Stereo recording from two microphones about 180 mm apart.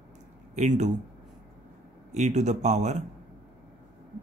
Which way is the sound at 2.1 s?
40° right (ahead or behind).